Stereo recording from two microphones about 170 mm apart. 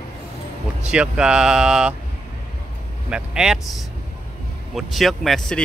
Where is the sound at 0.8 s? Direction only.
5° right (ahead or behind).